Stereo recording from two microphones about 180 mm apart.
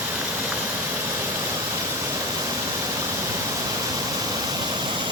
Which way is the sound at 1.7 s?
15° right (ahead or behind).